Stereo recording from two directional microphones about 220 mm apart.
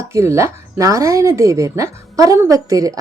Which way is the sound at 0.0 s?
15° right (ahead or behind).